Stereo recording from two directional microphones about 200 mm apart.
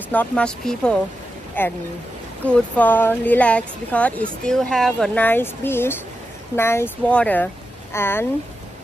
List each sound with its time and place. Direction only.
0.1 s speech: 5° left (ahead or behind)